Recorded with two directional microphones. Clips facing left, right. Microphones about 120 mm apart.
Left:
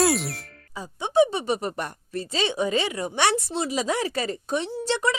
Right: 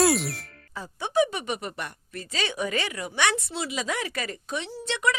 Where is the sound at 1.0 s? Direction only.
25° left (ahead or behind).